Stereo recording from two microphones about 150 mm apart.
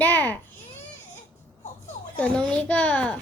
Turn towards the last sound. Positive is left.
turn(degrees=10)  # may be behind; listen again after turning